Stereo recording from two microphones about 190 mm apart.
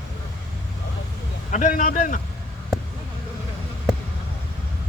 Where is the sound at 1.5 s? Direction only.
40° left (ahead or behind).